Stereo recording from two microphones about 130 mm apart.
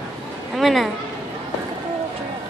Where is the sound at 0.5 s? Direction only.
Centre (ahead or behind).